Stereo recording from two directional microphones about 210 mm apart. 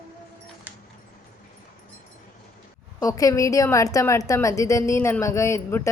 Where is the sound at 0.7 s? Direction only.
10° right (ahead or behind).